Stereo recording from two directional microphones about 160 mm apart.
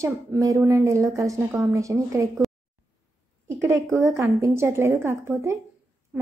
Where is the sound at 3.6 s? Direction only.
15° right (ahead or behind).